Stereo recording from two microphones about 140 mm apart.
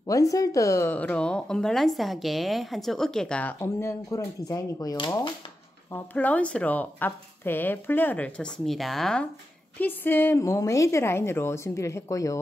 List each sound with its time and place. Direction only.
0.0 s speech: 25° left (ahead or behind); by 3.5 s 10° left (ahead or behind)
3.6 s a woman's voice: 20° left (ahead or behind)
5.9 s a woman's voice: 15° left (ahead or behind)